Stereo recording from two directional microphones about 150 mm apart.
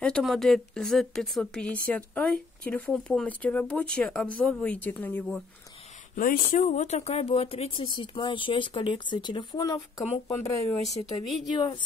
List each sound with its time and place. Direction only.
0.0 s speech: 5° left (ahead or behind)
6.1 s speech: 65° left (ahead or behind); by 10.8 s 20° left (ahead or behind)
11.5 s speech: 30° left (ahead or behind)